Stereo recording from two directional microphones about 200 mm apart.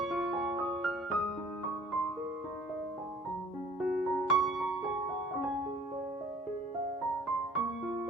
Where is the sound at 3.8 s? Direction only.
Centre (ahead or behind).